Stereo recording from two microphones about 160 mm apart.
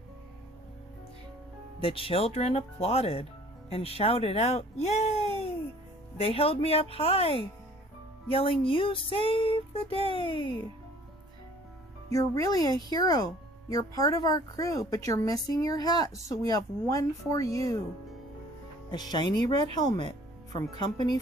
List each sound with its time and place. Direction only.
1.8 s a sound: 35° left (ahead or behind)
12.1 s speech: 20° left (ahead or behind)
18.9 s speech: 25° left (ahead or behind)